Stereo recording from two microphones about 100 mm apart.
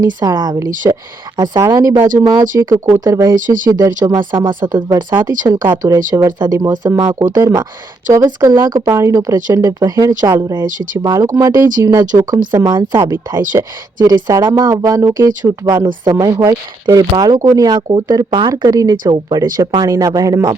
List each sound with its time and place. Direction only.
0.0 s speech: 40° right (ahead or behind)
4.2 s speech: 55° right (ahead or behind)
5.5 s speech: 35° right (ahead or behind)
12.1 s speech: 45° right (ahead or behind)
13.6 s speech: 35° right (ahead or behind)